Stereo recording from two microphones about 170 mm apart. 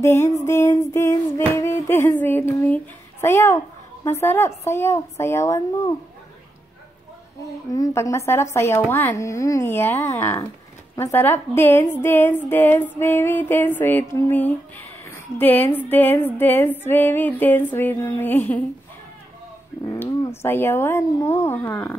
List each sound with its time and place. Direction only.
0.0 s a woman's voice: 15° left (ahead or behind)
7.7 s a woman's voice: 20° left (ahead or behind)
19.9 s a woman's voice: 15° left (ahead or behind)